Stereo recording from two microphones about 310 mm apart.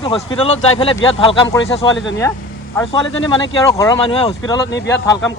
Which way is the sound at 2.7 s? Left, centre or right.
Centre.